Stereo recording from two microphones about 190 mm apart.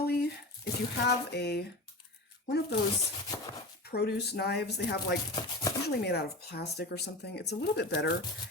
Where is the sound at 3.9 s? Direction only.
60° left (ahead or behind).